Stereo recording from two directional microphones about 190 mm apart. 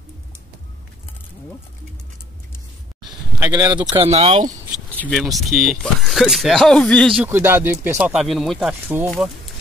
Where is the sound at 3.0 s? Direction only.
20° right (ahead or behind).